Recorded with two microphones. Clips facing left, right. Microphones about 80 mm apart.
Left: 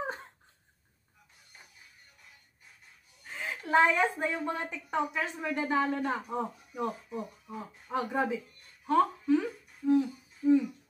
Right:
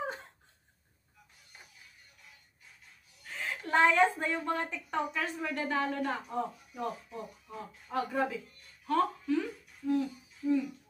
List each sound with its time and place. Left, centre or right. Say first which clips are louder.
3.3 s a woman's voice: left 2 dB; centre
8.8 s a sound: left 3 dB; left
9.8 s humming: left 5 dB; left